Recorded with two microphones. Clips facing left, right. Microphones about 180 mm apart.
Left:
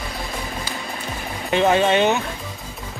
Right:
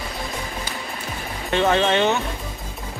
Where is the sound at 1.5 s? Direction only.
10° left (ahead or behind).